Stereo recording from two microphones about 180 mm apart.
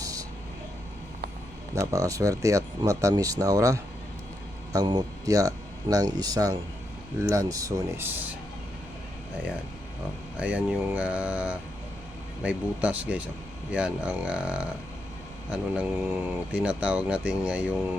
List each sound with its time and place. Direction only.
0.0 s vehicle: 20° right (ahead or behind)
1.7 s speech: 15° right (ahead or behind)
10.3 s speech: 5° right (ahead or behind)